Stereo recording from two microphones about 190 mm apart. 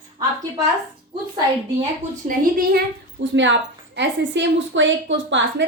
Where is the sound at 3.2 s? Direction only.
75° right (ahead or behind).